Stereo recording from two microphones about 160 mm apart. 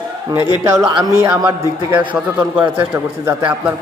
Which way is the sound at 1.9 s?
10° right (ahead or behind).